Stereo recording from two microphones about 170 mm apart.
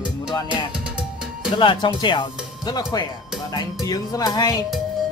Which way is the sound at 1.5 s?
30° left (ahead or behind).